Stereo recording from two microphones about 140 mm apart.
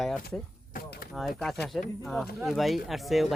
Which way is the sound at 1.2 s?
Centre (ahead or behind).